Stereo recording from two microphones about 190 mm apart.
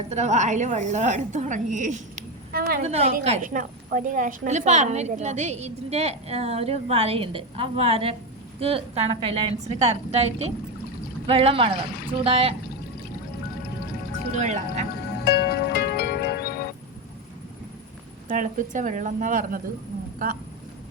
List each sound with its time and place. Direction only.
0.1 s a woman's voice: 35° right (ahead or behind)
2.5 s a woman's voice: 50° right (ahead or behind)
2.8 s a woman's voice: 35° right (ahead or behind)
14.3 s a woman's voice: 40° right (ahead or behind)
15.2 s music: 55° left (ahead or behind)
18.3 s speech: 45° right (ahead or behind)